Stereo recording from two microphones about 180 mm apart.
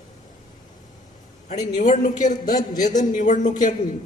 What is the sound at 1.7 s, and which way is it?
Speech, 40° left (ahead or behind).